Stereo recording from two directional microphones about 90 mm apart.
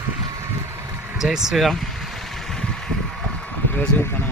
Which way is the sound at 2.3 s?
5° left (ahead or behind).